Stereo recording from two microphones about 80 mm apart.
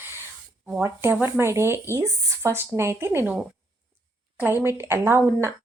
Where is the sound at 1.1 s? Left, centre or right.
Right.